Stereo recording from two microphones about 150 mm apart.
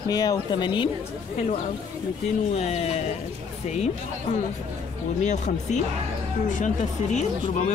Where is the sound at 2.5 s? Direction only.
45° left (ahead or behind).